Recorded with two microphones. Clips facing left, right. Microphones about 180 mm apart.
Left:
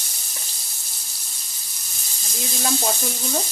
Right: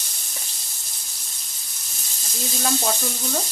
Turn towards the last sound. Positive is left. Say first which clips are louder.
# even
turn(degrees=5)  # may be behind; listen again after turning